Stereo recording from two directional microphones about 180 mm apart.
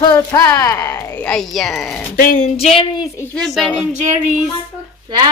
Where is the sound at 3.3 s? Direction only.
Centre (ahead or behind).